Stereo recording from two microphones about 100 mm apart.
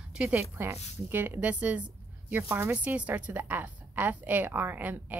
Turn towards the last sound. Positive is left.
turn(degrees=-15)  # may be behind; listen again after turning